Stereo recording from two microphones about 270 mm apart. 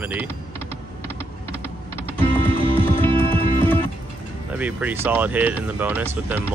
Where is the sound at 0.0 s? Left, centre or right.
Centre.